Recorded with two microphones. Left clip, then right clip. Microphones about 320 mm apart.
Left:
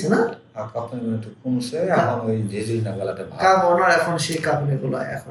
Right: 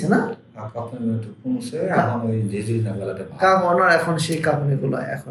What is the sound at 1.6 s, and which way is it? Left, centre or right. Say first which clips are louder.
A man's voice: left 1 dB; centre.